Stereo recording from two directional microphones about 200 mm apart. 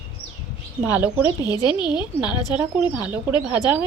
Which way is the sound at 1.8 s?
5° right (ahead or behind).